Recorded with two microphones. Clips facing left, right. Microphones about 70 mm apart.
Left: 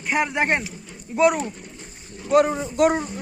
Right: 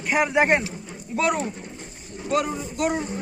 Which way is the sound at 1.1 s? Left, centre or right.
Centre.